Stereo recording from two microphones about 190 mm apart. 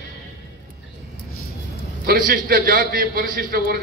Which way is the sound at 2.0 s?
50° right (ahead or behind).